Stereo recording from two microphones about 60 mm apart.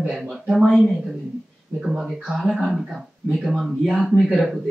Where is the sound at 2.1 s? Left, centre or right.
Centre.